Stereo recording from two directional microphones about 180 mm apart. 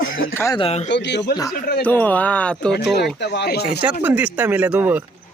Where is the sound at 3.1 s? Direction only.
70° left (ahead or behind).